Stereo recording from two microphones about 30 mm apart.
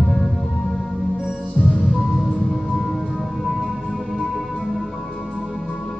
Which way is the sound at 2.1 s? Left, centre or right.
Centre.